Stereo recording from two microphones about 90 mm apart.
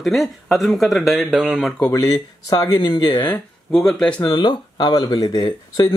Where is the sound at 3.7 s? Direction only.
5° left (ahead or behind).